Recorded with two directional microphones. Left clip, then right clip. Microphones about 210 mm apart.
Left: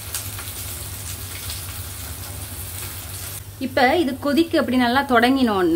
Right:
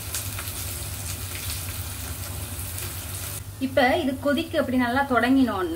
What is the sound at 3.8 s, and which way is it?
A woman's voice, 45° left (ahead or behind).